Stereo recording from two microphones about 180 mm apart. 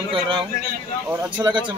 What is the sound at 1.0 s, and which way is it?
Speech, 10° right (ahead or behind).